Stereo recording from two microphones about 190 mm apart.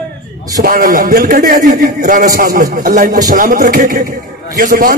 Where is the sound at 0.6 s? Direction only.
45° right (ahead or behind).